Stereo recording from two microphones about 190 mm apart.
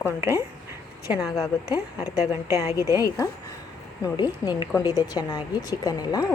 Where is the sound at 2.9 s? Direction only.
20° left (ahead or behind).